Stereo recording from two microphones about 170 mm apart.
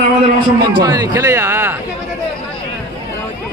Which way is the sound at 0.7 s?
20° right (ahead or behind).